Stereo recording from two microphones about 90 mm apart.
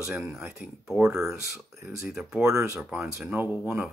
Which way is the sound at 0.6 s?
10° right (ahead or behind).